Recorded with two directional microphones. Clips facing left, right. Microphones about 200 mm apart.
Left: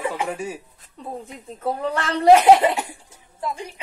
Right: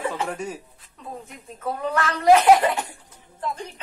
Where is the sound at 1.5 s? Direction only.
35° left (ahead or behind).